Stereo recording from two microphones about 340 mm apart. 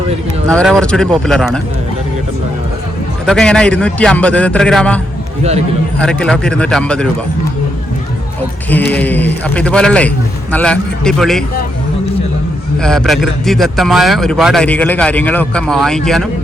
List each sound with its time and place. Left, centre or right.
0.4 s speech: centre
3.2 s speech: centre
6.0 s speech: centre
8.7 s speech: centre
12.8 s speech: centre